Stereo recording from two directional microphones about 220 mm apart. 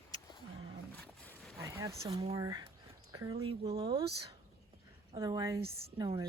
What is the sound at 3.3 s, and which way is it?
Speech, 25° right (ahead or behind).